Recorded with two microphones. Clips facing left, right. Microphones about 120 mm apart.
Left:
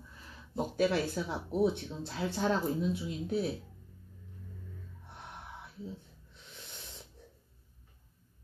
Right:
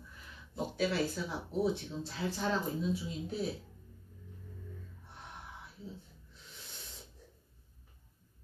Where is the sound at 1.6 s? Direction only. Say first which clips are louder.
Left 4 dB; 60° left (ahead or behind).